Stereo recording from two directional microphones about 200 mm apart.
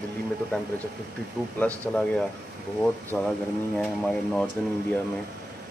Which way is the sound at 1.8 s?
5° left (ahead or behind).